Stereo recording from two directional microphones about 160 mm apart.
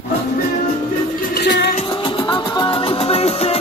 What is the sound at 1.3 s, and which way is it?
Music, 90° left.